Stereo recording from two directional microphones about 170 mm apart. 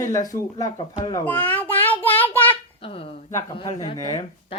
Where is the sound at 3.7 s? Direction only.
20° left (ahead or behind).